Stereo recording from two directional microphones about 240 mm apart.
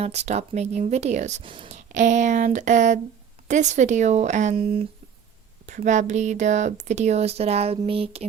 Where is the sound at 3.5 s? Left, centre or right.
Right.